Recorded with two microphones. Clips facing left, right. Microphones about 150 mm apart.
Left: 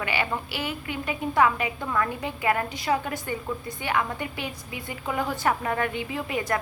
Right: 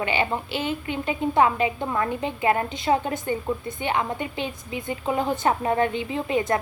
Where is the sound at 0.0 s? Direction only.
25° right (ahead or behind).